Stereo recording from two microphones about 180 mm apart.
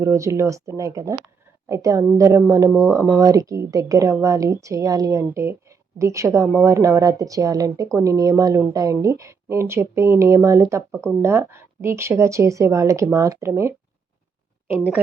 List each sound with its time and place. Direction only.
0.0 s a woman's voice: 15° right (ahead or behind)